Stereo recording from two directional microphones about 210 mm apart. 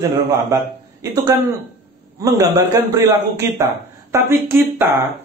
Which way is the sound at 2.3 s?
15° right (ahead or behind).